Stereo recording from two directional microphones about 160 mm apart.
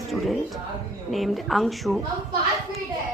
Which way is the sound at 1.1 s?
Centre (ahead or behind).